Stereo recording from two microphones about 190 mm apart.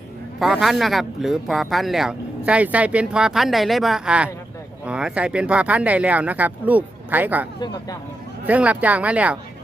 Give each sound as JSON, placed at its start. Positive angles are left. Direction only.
{"t": 0.3, "sound": "speech", "side_deg": 0}
{"t": 7.6, "sound": "speech", "side_deg": 20}
{"t": 8.4, "sound": "speech", "side_deg": -5}